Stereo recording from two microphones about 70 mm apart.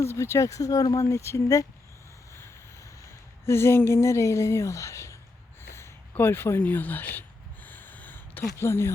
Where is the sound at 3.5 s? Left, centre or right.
Left.